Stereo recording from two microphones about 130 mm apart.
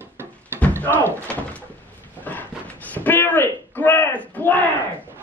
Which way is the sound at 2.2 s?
15° left (ahead or behind).